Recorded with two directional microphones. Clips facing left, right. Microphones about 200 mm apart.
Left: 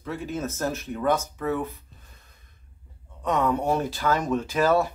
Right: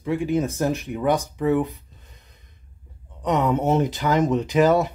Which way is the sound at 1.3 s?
15° right (ahead or behind).